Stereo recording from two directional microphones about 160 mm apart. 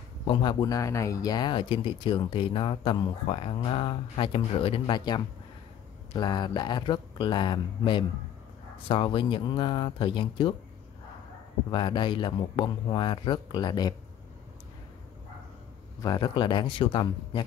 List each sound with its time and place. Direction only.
0.3 s speech: 30° left (ahead or behind)
11.7 s speech: 30° left (ahead or behind)
16.0 s speech: 25° left (ahead or behind)